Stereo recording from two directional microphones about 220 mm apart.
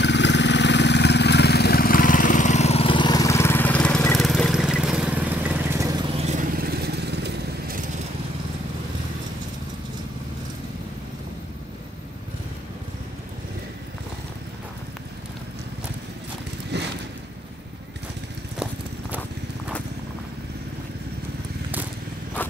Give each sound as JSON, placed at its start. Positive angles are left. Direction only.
{"t": 0.0, "sound": "vehicle", "side_deg": 55}
{"t": 16.7, "sound": "a sound", "side_deg": -50}
{"t": 18.6, "sound": "clip-clop", "side_deg": -10}